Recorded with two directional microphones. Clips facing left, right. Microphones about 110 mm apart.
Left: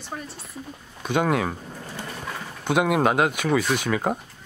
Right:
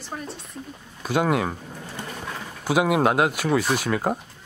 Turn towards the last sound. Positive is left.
turn(degrees=0)  # may be behind; listen again after turning